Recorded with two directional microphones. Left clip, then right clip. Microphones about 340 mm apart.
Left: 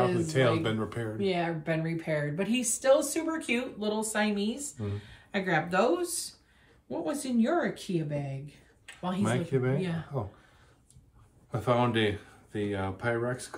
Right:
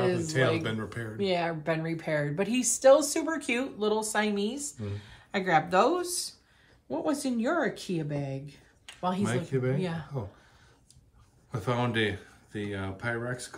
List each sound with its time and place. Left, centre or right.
0.3 s speech: centre
1.1 s a woman's voice: centre
9.2 s speech: centre
9.8 s a woman's voice: centre
11.5 s speech: centre